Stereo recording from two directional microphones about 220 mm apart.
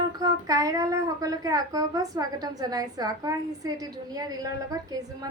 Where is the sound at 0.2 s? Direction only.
15° right (ahead or behind).